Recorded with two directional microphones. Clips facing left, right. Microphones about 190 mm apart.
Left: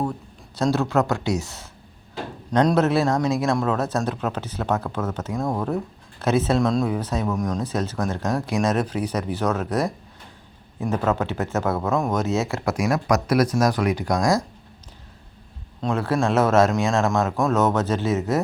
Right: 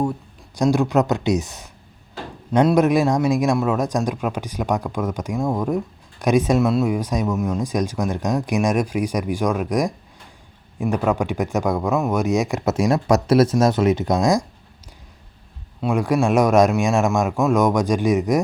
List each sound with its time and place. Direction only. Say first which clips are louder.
0.0 s a man's voice: right 4 dB; 15° right (ahead or behind)
15.8 s a man's voice: right 3 dB; 15° right (ahead or behind)